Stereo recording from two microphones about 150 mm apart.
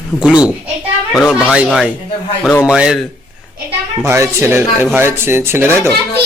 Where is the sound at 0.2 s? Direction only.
5° right (ahead or behind).